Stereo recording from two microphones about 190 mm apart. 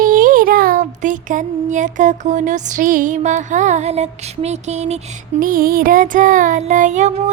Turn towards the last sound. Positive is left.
turn(degrees=-40)  # may be behind; listen again after turning